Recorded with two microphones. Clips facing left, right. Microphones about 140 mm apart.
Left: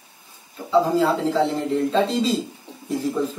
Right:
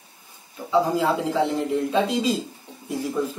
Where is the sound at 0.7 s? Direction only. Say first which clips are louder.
Left 2 dB; 10° right (ahead or behind).